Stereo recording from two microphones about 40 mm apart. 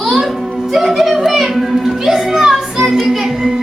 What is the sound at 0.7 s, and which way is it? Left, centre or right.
Music, centre.